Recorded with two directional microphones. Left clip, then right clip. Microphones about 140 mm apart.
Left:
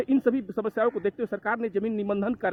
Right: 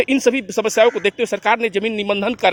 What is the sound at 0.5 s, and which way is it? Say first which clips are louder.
A man's voice: right 11 dB; 15° right (ahead or behind).